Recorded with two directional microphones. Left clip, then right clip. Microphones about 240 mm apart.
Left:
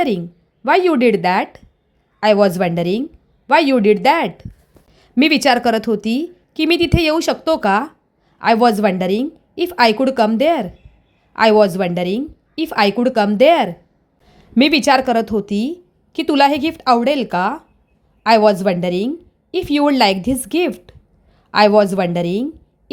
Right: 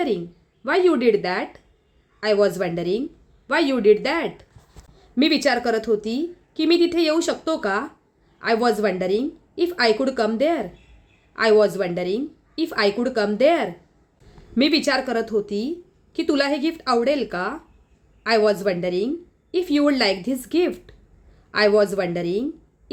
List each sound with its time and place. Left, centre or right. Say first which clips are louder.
0.6 s a woman's voice: left 5 dB; left